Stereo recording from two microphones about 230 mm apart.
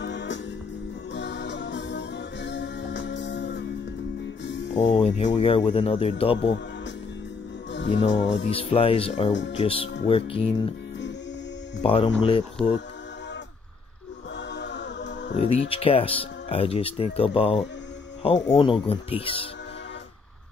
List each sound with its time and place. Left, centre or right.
0.0 s music: left
4.9 s speech: left
7.7 s music: left
8.5 s speech: left
9.3 s speech: left
9.6 s speech: left
11.8 s speech: left
14.5 s music: left
15.7 s speech: left